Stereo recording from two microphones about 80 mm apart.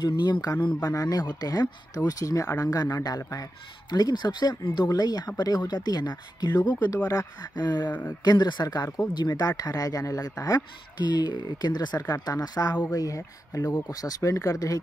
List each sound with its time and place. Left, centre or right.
0.6 s a man's voice: centre
0.8 s speech: left
3.9 s speech: left
11.1 s speech: left
12.0 s speech: left